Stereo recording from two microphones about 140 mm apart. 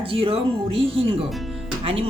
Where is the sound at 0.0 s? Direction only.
40° right (ahead or behind).